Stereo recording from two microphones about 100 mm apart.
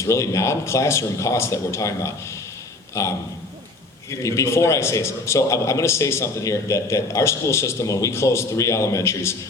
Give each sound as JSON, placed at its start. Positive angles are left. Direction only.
{"t": 0.0, "sound": "a man's voice", "side_deg": 30}
{"t": 4.2, "sound": "a man's voice", "side_deg": 30}